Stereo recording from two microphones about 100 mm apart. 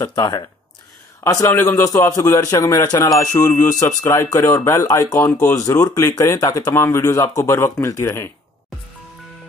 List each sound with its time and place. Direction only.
0.0 s a man's voice: 40° left (ahead or behind)
1.2 s a man's voice: 25° left (ahead or behind)